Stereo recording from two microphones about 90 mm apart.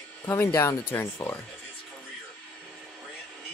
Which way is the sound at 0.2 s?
30° left (ahead or behind).